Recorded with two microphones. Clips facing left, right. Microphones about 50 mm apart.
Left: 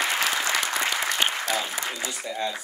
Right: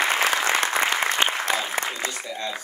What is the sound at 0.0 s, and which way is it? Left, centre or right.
Applause, right.